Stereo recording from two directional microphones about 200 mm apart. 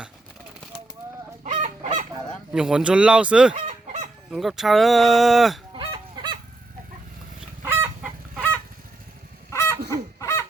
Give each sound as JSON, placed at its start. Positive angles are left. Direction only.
{"t": 1.5, "sound": "fowl", "side_deg": -35}
{"t": 2.5, "sound": "speech", "side_deg": -5}
{"t": 3.5, "sound": "fowl", "side_deg": -35}
{"t": 4.3, "sound": "speech", "side_deg": 0}
{"t": 5.7, "sound": "goose", "side_deg": -25}
{"t": 7.6, "sound": "chicken", "side_deg": -10}
{"t": 9.5, "sound": "fowl", "side_deg": 15}